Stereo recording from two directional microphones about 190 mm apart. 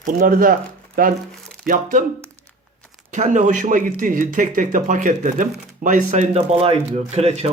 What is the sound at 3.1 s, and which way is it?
Speech, 40° right (ahead or behind).